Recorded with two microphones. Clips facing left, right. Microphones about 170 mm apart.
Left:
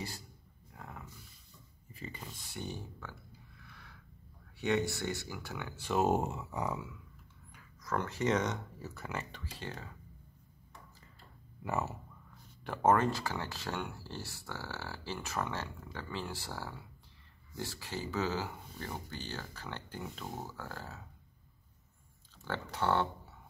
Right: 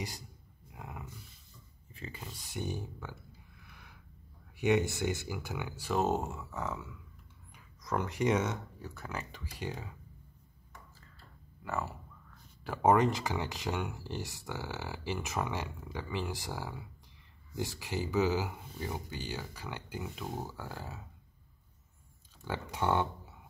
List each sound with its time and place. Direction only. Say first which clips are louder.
0.7 s a sound: right 2 dB; 10° right (ahead or behind)
1.9 s a sound: even; centre (ahead or behind)
2.5 s speech: right 5 dB; 15° right (ahead or behind)
3.6 s a sound: right 1 dB; 15° right (ahead or behind)
4.6 s speech: right 3 dB; 15° right (ahead or behind)
5.9 s speech: left 1 dB; 10° left (ahead or behind)
7.5 s speech: right 1 dB; 15° right (ahead or behind); by 9.3 s centre (ahead or behind)
9.3 s speech: right 3 dB; 15° right (ahead or behind)
11.0 s clicking: even; 15° left (ahead or behind)
12.6 s speech: right 2 dB; 10° right (ahead or behind)
22.4 s speech: right 1 dB; 15° right (ahead or behind)